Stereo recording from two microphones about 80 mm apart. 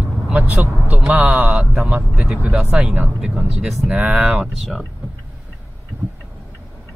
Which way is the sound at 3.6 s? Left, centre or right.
Centre.